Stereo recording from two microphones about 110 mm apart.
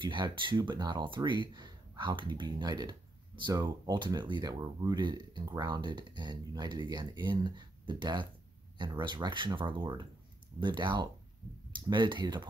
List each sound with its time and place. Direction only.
0.0 s speech: 45° right (ahead or behind)